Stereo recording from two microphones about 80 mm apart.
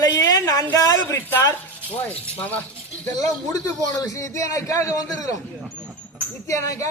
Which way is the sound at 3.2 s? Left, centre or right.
Left.